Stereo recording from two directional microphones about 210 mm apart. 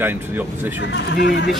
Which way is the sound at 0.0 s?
10° right (ahead or behind).